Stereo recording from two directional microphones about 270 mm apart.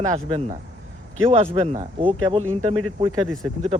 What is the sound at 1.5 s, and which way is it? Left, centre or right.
Speech, right.